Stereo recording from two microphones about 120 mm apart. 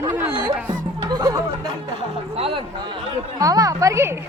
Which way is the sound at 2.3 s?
50° right (ahead or behind).